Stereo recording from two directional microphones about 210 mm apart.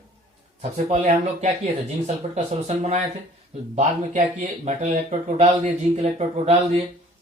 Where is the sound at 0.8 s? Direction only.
30° right (ahead or behind).